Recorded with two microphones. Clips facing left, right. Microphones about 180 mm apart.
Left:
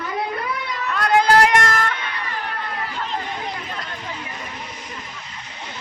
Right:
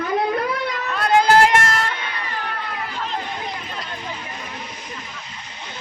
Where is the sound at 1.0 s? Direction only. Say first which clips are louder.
Right 1 dB; 25° right (ahead or behind).